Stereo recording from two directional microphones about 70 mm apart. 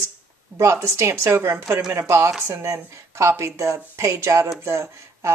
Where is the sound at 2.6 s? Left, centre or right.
Right.